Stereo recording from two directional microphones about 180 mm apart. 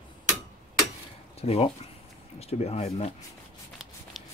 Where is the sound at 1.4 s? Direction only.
35° left (ahead or behind).